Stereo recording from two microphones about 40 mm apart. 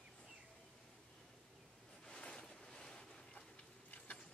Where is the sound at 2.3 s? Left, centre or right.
Centre.